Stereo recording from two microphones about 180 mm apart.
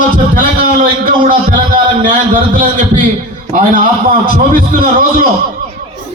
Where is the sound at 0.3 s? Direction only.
50° right (ahead or behind).